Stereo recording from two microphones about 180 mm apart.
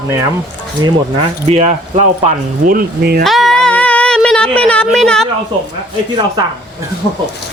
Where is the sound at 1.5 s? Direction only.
40° right (ahead or behind); by 3.2 s 60° right (ahead or behind).